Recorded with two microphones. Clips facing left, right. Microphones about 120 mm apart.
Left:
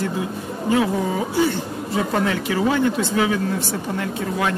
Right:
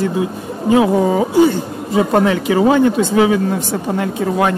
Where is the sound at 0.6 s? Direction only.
20° right (ahead or behind).